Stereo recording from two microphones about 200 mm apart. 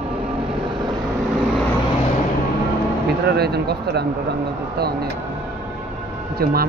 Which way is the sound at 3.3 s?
55° right (ahead or behind).